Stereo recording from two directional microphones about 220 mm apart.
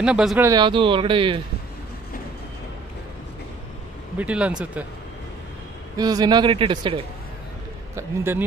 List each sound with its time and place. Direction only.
0.0 s speech: centre (ahead or behind)
0.5 s speech: 20° right (ahead or behind)
4.2 s speech: 5° right (ahead or behind)
5.9 s speech: 15° right (ahead or behind)
7.9 s a man's voice: 10° right (ahead or behind)